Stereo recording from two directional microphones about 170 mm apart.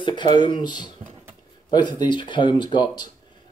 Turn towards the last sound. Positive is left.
turn(degrees=25)  # may be behind; listen again after turning